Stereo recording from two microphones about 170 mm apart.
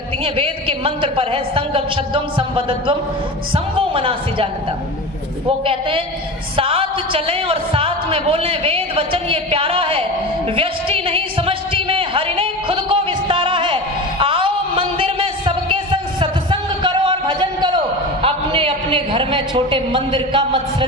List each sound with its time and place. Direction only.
0.3 s speech: 35° right (ahead or behind)
5.5 s speech: 30° right (ahead or behind)
10.5 s a sound: 35° right (ahead or behind)
18.2 s a man's voice: 35° right (ahead or behind)